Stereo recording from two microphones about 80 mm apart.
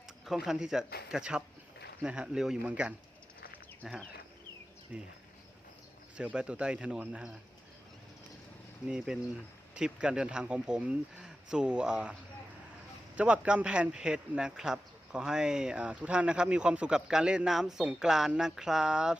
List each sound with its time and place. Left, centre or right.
0.3 s speech: centre
4.9 s speech: centre
6.1 s speech: centre
8.9 s speech: centre
13.1 s speech: centre